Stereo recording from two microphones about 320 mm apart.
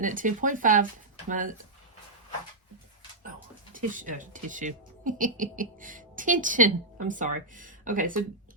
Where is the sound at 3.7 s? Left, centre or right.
Right.